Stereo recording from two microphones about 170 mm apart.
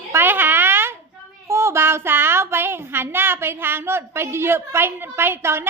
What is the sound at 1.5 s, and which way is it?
Speech, 15° right (ahead or behind).